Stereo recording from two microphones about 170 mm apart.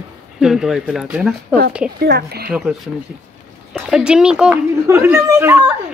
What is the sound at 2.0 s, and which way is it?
Speech, 70° right (ahead or behind).